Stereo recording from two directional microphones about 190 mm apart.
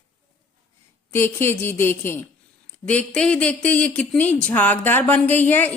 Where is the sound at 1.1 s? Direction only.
10° left (ahead or behind).